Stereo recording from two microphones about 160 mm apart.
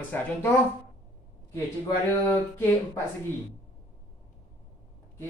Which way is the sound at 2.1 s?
10° left (ahead or behind).